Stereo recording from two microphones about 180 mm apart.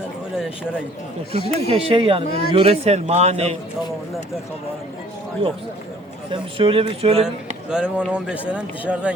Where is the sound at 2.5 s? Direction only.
35° right (ahead or behind).